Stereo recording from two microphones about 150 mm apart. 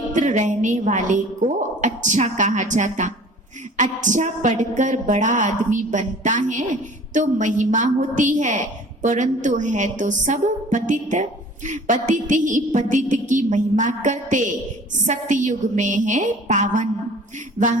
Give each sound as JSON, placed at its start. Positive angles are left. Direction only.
{"t": 0.1, "sound": "a woman's voice", "side_deg": -55}